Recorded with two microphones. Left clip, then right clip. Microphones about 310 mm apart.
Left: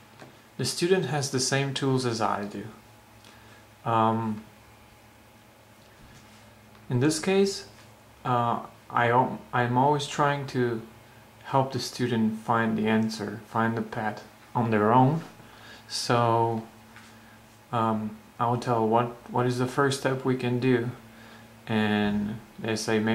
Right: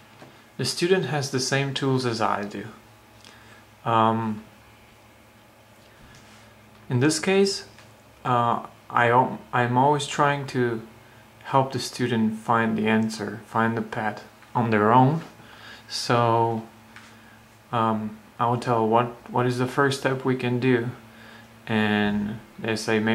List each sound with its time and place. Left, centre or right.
0.2 s speech: centre
3.8 s speech: centre
6.9 s speech: centre
12.0 s speech: centre
17.6 s speech: centre
22.1 s speech: centre
22.6 s speech: centre